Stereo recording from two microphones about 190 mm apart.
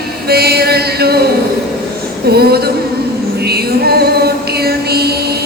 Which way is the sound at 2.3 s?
55° right (ahead or behind).